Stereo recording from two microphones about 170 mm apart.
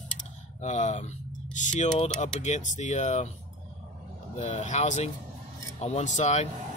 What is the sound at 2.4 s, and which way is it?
Speech, 45° left (ahead or behind).